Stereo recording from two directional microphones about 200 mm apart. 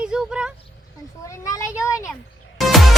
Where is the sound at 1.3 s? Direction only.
15° left (ahead or behind).